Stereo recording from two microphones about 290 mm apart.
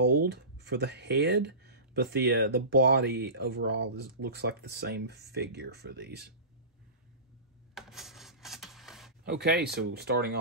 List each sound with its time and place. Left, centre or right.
0.2 s speech: right
7.7 s rub: centre
9.2 s speech: right